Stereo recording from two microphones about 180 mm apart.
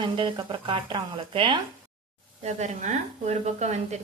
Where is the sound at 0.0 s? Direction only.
25° right (ahead or behind).